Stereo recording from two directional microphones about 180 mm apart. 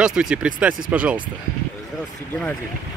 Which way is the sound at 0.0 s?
5° right (ahead or behind).